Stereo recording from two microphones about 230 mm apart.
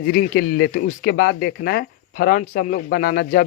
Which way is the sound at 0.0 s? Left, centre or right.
Left.